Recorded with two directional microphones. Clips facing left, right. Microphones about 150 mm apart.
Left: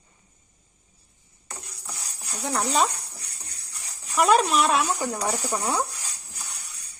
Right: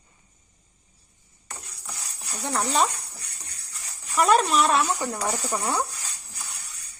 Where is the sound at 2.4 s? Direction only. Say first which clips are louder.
Even; centre (ahead or behind).